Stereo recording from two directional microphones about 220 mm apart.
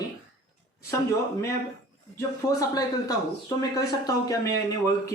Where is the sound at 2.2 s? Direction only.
15° left (ahead or behind).